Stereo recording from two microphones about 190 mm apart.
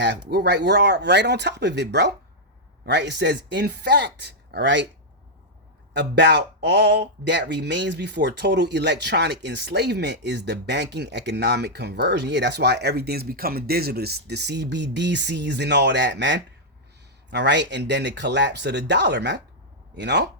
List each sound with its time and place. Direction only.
0.3 s speech: 60° right (ahead or behind)
5.9 s speech: 65° right (ahead or behind)